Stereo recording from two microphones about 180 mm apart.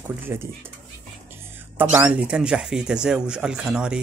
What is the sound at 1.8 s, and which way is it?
Speech, 10° right (ahead or behind).